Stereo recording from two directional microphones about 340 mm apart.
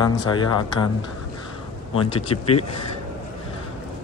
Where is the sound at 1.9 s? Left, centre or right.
Centre.